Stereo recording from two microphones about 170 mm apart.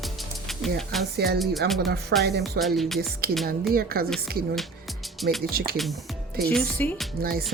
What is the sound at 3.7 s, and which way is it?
Speech, 60° right (ahead or behind).